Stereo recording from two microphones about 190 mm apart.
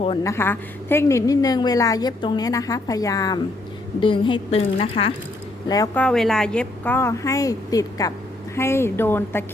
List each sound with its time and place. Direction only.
0.2 s a woman's voice: 15° left (ahead or behind); by 5.1 s 30° left (ahead or behind)
5.6 s a woman's voice: 20° left (ahead or behind)
6.0 s a woman's voice: 5° left (ahead or behind)